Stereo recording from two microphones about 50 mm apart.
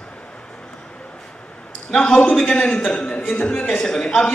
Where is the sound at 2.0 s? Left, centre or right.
Centre.